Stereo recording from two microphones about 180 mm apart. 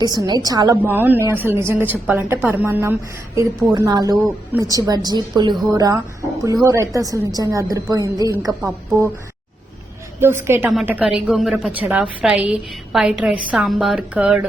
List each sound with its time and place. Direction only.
0.0 s a woman's voice: 20° right (ahead or behind)
0.8 s a woman's voice: 10° right (ahead or behind)
10.2 s a woman's voice: 15° right (ahead or behind)